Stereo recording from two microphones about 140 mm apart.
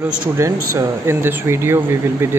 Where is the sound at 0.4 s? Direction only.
20° right (ahead or behind).